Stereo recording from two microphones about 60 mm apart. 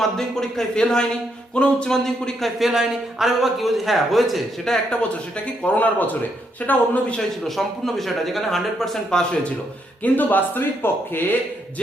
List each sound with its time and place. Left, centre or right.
0.2 s speech: centre
2.6 s a man's voice: centre
5.6 s speech: left
7.4 s a man's voice: centre
10.0 s speech: left